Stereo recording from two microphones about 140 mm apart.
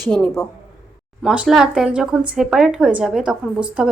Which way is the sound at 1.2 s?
5° right (ahead or behind).